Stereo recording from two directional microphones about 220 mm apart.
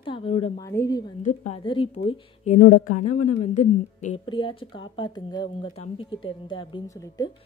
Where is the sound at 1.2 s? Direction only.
30° left (ahead or behind).